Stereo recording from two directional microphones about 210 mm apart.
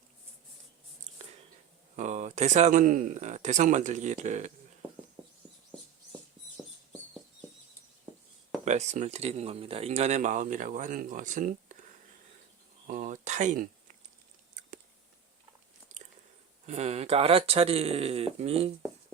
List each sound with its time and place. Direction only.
2.0 s speech: 35° right (ahead or behind)
8.6 s speech: 35° right (ahead or behind)
12.9 s a sound: 35° right (ahead or behind)
16.6 s speech: 30° right (ahead or behind)